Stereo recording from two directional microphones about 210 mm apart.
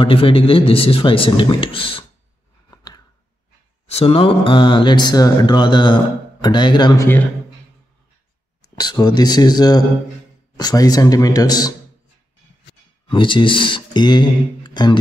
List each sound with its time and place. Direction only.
0.0 s a man's voice: 25° left (ahead or behind)
2.7 s scissors: 20° left (ahead or behind)
3.9 s a man's voice: 25° left (ahead or behind)
8.7 s a man's voice: 20° left (ahead or behind)
13.1 s speech: 25° left (ahead or behind)